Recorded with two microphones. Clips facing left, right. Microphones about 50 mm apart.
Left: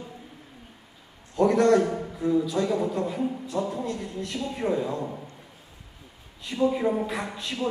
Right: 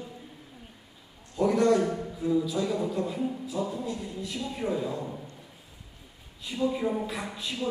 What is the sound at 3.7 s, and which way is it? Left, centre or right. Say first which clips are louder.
Speech: left 3 dB; left.